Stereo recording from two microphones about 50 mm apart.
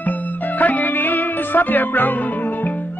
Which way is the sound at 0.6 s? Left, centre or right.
Left.